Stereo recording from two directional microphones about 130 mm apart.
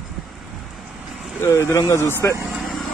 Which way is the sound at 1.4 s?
20° left (ahead or behind).